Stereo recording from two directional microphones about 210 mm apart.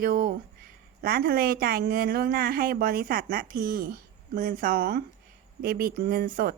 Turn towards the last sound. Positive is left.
turn(degrees=-40)  # may be behind; listen again after turning